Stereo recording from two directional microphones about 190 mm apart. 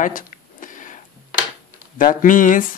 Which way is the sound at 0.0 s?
45° left (ahead or behind).